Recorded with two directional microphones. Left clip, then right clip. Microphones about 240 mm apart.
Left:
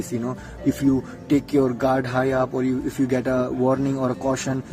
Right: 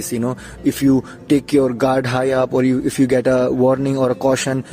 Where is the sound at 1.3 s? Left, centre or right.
Right.